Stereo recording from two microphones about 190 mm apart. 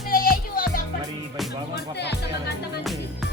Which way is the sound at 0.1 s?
50° left (ahead or behind).